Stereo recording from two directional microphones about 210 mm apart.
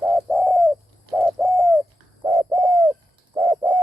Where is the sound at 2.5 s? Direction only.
20° right (ahead or behind).